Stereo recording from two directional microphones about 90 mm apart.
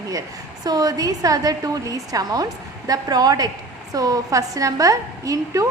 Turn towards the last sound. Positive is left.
turn(degrees=-40)  # may be behind; listen again after turning